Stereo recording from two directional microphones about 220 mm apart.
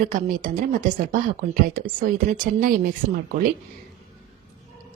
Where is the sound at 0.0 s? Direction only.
40° right (ahead or behind).